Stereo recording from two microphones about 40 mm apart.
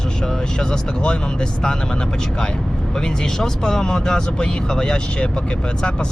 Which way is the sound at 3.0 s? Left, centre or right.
Centre.